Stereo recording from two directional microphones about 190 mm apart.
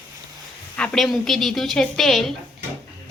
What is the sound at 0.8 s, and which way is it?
Speech, 5° left (ahead or behind).